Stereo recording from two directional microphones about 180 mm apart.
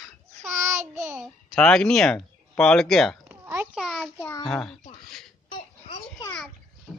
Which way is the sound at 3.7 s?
Centre (ahead or behind).